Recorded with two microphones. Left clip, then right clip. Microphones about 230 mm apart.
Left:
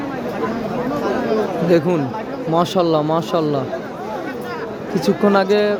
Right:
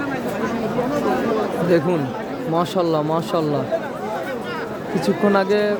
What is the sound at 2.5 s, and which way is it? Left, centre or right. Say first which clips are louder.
Speech: left 3 dB; centre.